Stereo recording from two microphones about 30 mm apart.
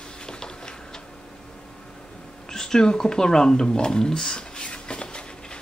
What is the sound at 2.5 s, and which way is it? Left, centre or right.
Speech, left.